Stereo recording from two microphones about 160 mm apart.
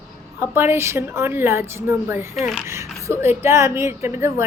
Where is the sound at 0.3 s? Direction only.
15° right (ahead or behind).